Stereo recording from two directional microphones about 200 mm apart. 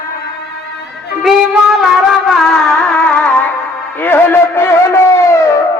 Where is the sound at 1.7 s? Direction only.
Centre (ahead or behind).